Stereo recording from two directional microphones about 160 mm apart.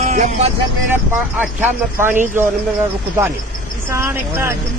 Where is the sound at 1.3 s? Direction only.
10° right (ahead or behind).